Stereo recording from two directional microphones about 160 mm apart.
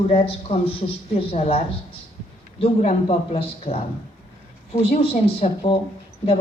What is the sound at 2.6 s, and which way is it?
A man's voice, 40° left (ahead or behind).